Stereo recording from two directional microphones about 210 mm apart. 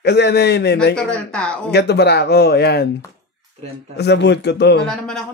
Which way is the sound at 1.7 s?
50° left (ahead or behind).